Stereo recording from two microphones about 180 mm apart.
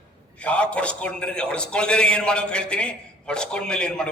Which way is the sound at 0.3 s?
5° left (ahead or behind).